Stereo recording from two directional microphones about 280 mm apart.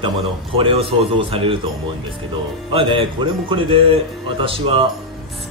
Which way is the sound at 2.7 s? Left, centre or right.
Centre.